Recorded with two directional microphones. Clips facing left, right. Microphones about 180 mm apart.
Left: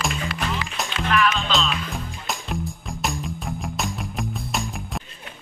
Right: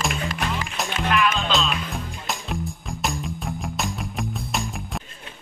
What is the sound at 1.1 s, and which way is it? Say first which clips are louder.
Music: left 1 dB; 15° right (ahead or behind).